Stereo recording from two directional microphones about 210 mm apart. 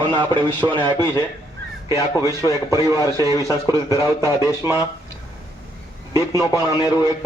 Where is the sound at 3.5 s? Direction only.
15° right (ahead or behind).